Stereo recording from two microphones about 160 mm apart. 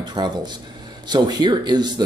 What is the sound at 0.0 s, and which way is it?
Speech, 25° right (ahead or behind).